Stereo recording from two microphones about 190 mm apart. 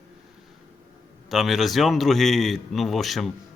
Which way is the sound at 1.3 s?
Centre (ahead or behind).